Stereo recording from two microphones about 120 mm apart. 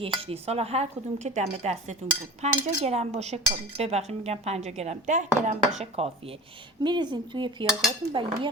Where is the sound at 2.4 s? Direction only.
65° right (ahead or behind).